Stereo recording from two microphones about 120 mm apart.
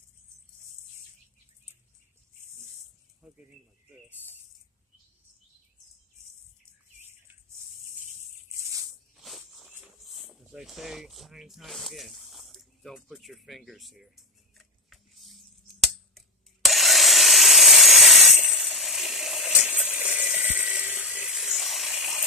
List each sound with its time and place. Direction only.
3.2 s speech: 5° right (ahead or behind)
7.0 s bird: 20° right (ahead or behind)
8.5 s maraca: 25° right (ahead or behind)
9.1 s a sound: centre (ahead or behind)